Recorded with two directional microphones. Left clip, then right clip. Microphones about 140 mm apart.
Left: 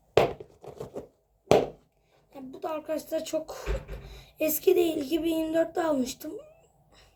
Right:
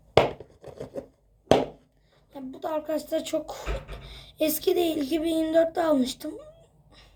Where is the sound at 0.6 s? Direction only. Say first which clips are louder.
Right 2 dB; 10° left (ahead or behind).